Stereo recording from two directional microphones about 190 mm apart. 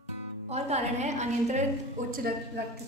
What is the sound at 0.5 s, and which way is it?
A woman's voice, 35° right (ahead or behind).